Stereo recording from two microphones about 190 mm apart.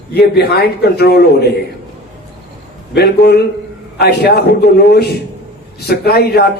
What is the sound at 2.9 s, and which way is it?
Speech, 60° left (ahead or behind).